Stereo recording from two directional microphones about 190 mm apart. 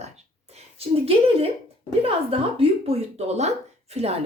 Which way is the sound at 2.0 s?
30° right (ahead or behind).